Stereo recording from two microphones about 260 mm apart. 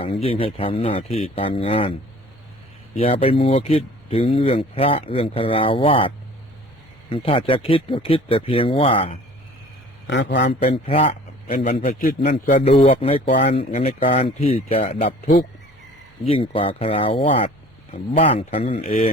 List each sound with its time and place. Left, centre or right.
0.0 s speech: left
3.0 s speech: left
10.1 s a man's voice: left
10.6 s a man's voice: left
16.2 s speech: left